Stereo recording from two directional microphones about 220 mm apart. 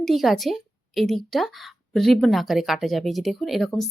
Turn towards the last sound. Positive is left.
turn(degrees=0)  # may be behind; listen again after turning